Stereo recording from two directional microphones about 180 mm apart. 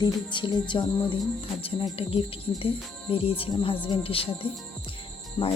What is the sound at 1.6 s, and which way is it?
Speech, 30° left (ahead or behind).